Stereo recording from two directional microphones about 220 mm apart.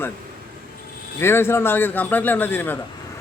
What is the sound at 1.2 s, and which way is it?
A man's voice, 10° left (ahead or behind).